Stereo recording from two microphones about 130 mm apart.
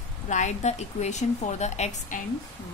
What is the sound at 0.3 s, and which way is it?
A woman's voice, 65° left (ahead or behind).